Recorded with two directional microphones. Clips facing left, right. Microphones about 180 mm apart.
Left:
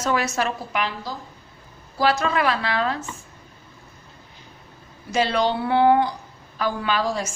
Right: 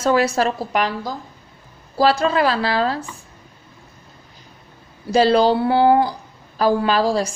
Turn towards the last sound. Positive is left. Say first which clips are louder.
# right 6 dB
turn(degrees=-35)  # may be behind; listen again after turning